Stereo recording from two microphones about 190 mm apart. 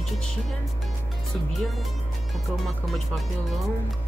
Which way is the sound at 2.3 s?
Centre (ahead or behind).